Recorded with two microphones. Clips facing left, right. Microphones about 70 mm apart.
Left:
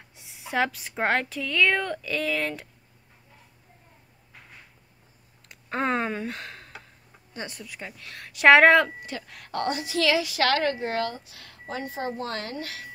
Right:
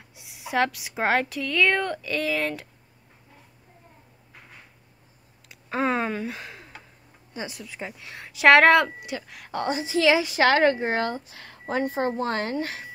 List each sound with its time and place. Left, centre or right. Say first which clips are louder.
0.2 s a woman's voice: right 2 dB; centre
5.5 s speech: right 1 dB; centre
6.3 s a sound: even; centre
7.3 s speech: right 2 dB; centre
8.5 s a woman's voice: even; centre; by 11.7 s right
11.7 s a woman's voice: right 6 dB; right